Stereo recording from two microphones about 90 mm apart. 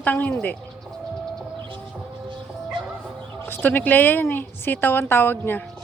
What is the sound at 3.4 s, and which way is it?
Speech, 20° left (ahead or behind).